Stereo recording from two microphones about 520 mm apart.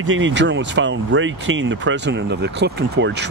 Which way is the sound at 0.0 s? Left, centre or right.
Right.